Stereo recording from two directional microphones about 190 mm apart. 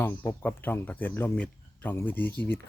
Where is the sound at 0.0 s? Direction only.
10° left (ahead or behind).